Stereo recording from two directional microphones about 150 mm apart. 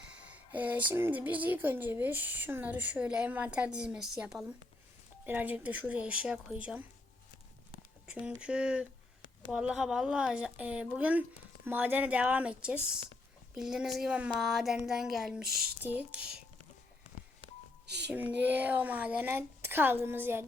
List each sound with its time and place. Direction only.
0.1 s speech: 10° right (ahead or behind)
8.0 s a sound: 5° right (ahead or behind)
8.4 s speech: 5° right (ahead or behind)
15.4 s a sound: 90° right
15.8 s speech: 10° right (ahead or behind)
18.1 s speech: 10° right (ahead or behind)